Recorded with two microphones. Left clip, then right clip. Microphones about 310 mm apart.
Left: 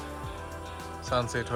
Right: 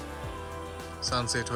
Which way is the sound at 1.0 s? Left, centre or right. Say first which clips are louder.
Even; centre.